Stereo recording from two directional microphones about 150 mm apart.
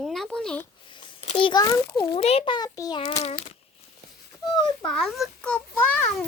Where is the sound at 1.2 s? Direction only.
35° left (ahead or behind).